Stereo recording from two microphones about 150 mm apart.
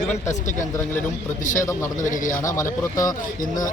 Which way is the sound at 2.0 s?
60° left (ahead or behind).